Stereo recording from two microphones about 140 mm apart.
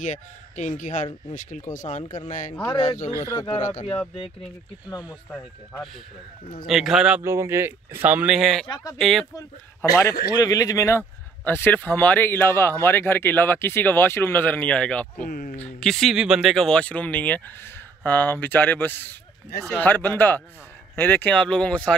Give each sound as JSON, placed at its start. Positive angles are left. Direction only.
{"t": 0.0, "sound": "speech", "side_deg": 60}
{"t": 2.7, "sound": "speech", "side_deg": 35}
{"t": 5.3, "sound": "speech", "side_deg": 10}
{"t": 6.6, "sound": "speech", "side_deg": -5}
{"t": 7.2, "sound": "speech", "side_deg": -20}
{"t": 8.6, "sound": "speech", "side_deg": 30}
{"t": 8.9, "sound": "speech", "side_deg": 0}
{"t": 9.8, "sound": "a man's voice", "side_deg": 20}
{"t": 15.2, "sound": "speech", "side_deg": 90}
{"t": 15.5, "sound": "speech", "side_deg": 5}